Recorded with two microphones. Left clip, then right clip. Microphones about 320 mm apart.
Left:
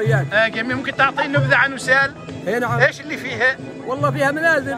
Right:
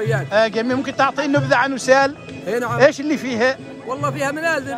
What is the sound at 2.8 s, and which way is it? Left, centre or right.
Speech, right.